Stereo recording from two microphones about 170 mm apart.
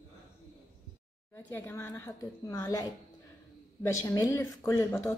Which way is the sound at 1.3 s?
15° left (ahead or behind).